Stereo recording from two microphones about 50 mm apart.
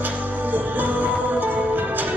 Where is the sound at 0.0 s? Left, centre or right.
Right.